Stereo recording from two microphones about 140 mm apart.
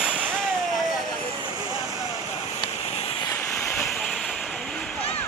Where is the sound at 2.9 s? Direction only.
45° left (ahead or behind).